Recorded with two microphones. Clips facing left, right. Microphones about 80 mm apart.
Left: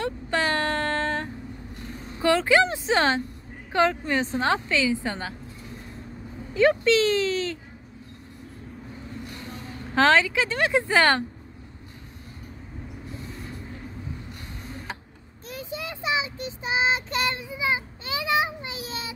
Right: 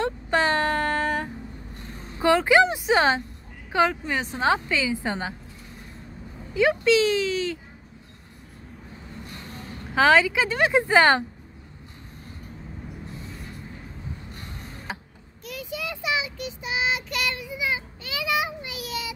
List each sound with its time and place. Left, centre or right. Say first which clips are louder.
0.0 s a sound: right 3 dB; right
2.1 s speech: right 2 dB; right
6.5 s speech: even; centre
9.9 s speech: right 1 dB; centre
15.4 s child singing: right 1 dB; left